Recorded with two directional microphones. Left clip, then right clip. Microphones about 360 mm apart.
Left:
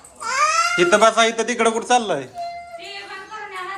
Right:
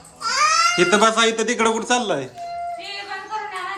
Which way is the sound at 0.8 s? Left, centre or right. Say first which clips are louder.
Left 5 dB; centre.